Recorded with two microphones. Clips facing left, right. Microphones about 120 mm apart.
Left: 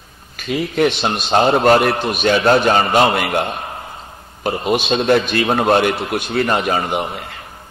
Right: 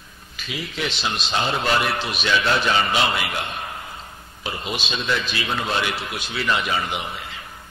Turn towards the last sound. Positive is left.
turn(degrees=50)  # may be behind; listen again after turning